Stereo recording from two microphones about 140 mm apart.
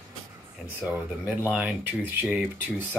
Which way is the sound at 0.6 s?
10° right (ahead or behind).